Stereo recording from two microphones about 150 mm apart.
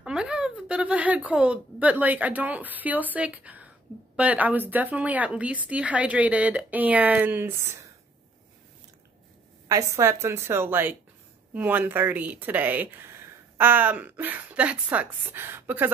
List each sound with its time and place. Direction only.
0.0 s speech: 5° right (ahead or behind)
9.7 s a woman's voice: 20° right (ahead or behind)